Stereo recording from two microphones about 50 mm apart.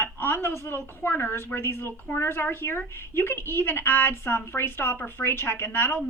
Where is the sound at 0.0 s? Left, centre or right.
Left.